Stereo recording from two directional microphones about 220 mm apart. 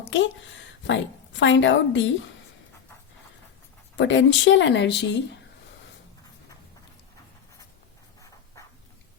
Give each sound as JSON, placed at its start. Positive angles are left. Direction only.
{"t": 0.0, "sound": "a woman's voice", "side_deg": 55}
{"t": 3.9, "sound": "speech", "side_deg": 55}